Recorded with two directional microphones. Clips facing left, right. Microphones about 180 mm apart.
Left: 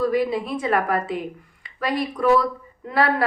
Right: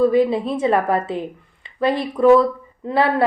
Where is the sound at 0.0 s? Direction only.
25° right (ahead or behind).